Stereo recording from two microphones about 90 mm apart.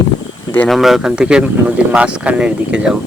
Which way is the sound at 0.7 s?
Centre (ahead or behind).